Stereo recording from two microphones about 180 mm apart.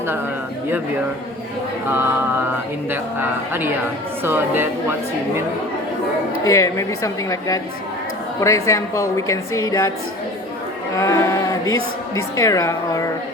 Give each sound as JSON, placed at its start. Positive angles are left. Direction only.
{"t": 1.9, "sound": "speech", "side_deg": -10}
{"t": 6.4, "sound": "a woman's voice", "side_deg": 15}
{"t": 10.9, "sound": "speech", "side_deg": 20}